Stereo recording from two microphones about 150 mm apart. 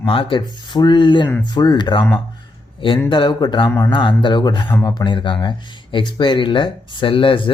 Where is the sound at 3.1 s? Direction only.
30° left (ahead or behind).